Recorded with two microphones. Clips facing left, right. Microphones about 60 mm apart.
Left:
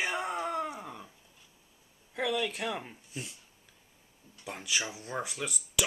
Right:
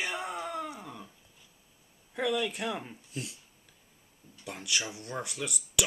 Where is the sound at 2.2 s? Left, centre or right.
Centre.